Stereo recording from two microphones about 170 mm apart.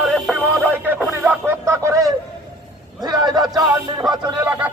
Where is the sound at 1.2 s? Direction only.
10° right (ahead or behind).